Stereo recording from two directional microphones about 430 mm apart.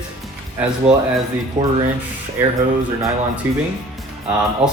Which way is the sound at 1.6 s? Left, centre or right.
Centre.